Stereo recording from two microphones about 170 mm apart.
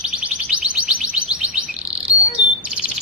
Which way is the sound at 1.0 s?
5° right (ahead or behind).